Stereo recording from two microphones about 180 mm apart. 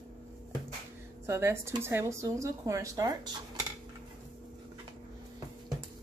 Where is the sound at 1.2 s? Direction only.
15° right (ahead or behind).